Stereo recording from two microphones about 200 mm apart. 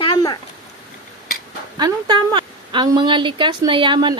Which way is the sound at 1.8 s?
20° right (ahead or behind).